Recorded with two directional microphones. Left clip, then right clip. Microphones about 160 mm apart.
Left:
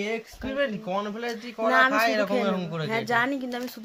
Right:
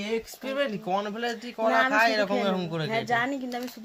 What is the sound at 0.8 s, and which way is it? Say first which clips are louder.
Speech: right 1 dB; 30° right (ahead or behind).